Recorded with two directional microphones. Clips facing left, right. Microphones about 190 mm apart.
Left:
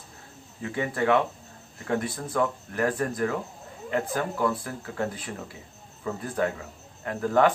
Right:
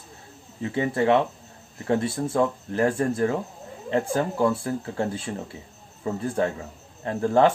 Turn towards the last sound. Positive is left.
turn(degrees=-30)  # may be behind; listen again after turning